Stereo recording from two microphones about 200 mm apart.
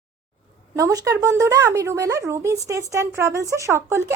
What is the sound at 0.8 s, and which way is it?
Speech, 15° right (ahead or behind).